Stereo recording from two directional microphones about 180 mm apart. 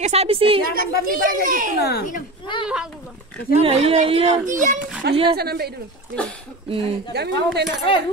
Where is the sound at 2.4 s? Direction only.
25° left (ahead or behind).